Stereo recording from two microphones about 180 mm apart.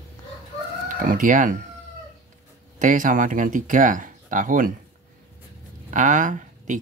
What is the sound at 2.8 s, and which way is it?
Speech, 45° right (ahead or behind).